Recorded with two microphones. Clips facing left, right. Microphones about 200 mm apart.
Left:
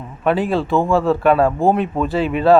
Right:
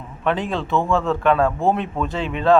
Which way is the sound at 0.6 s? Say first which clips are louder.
Left 4 dB; 35° left (ahead or behind).